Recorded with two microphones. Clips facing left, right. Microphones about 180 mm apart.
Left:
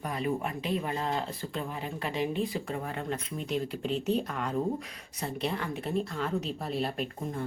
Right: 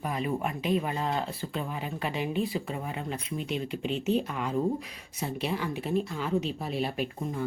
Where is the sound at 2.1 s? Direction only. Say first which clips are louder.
Left 1 dB; 30° left (ahead or behind).